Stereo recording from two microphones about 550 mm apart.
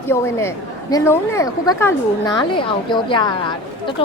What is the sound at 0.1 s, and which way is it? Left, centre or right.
A woman's voice, centre.